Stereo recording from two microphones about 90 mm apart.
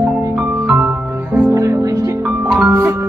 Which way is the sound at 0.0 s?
20° right (ahead or behind).